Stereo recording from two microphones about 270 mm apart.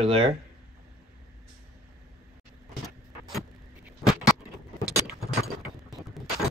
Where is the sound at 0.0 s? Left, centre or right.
Centre.